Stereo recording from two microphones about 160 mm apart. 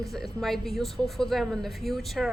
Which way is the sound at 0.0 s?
Centre (ahead or behind).